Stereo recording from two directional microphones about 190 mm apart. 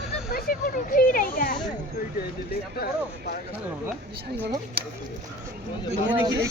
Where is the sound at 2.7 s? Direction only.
55° left (ahead or behind).